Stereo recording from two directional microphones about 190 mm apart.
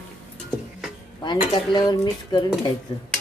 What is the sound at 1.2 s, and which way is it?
Dishes, 25° left (ahead or behind).